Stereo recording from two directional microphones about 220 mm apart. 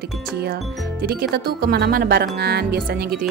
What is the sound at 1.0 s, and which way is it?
Speech, 45° right (ahead or behind).